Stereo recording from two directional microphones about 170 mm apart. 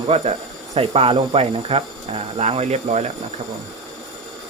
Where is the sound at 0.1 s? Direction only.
35° right (ahead or behind).